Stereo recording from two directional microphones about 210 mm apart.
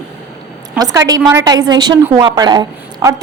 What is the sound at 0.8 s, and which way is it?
A woman's voice, 15° right (ahead or behind).